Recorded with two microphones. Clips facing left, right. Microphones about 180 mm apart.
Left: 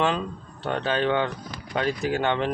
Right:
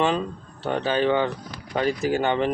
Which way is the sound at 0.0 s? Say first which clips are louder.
Right 2 dB; 5° right (ahead or behind).